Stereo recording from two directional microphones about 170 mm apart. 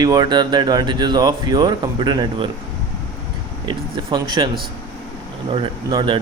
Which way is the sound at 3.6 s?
25° right (ahead or behind).